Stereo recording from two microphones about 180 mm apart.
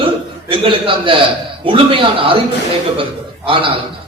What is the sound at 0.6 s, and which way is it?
A man's voice, 30° right (ahead or behind).